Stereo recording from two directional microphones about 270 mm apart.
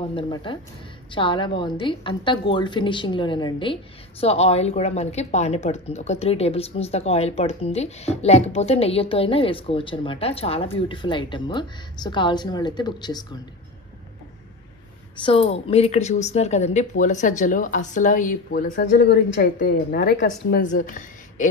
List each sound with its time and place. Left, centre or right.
0.1 s a woman's voice: centre
15.1 s a woman's voice: centre